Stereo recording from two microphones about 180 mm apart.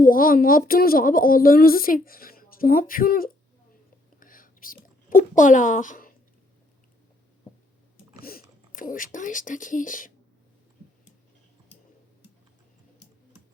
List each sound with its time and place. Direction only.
0.0 s a woman's voice: 50° left (ahead or behind)
4.2 s whispering: 50° left (ahead or behind)
8.2 s speech: 55° left (ahead or behind)